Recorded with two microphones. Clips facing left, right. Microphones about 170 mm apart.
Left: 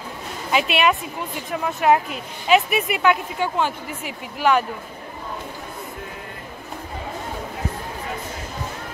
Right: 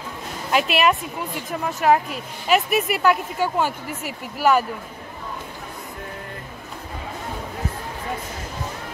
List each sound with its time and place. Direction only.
0.5 s speech: centre (ahead or behind)